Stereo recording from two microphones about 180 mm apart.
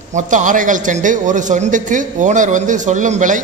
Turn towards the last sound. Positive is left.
turn(degrees=-45)  # may be behind; listen again after turning